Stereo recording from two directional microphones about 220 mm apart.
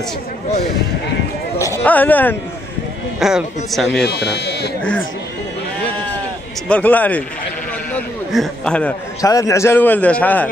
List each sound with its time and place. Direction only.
1.9 s a man's voice: 10° left (ahead or behind)
4.0 s speech: 50° left (ahead or behind)
6.7 s a man's voice: 5° left (ahead or behind)
7.9 s a sound: centre (ahead or behind)
9.2 s a man's voice: 15° left (ahead or behind)